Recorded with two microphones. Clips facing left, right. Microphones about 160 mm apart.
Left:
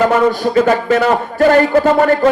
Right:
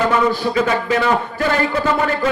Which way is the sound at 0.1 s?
45° left (ahead or behind).